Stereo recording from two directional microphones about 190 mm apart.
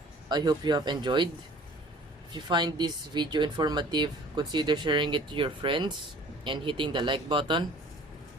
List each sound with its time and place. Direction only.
0.3 s speech: 20° right (ahead or behind)
2.3 s speech: 20° right (ahead or behind)